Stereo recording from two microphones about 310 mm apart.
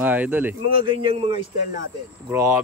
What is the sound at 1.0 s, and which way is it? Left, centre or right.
Speech, centre.